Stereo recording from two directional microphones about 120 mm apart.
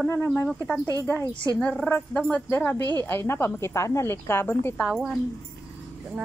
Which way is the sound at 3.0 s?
20° left (ahead or behind).